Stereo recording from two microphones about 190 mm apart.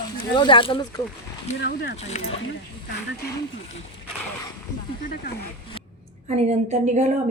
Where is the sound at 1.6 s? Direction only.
55° left (ahead or behind).